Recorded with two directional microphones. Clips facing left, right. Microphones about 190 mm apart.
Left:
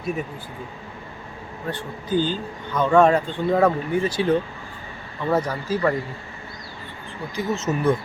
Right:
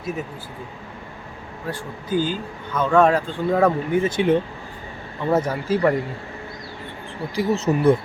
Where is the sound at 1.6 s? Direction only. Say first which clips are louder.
Even; 10° right (ahead or behind).